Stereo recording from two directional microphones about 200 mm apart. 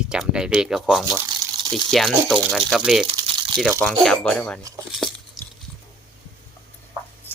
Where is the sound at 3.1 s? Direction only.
20° right (ahead or behind).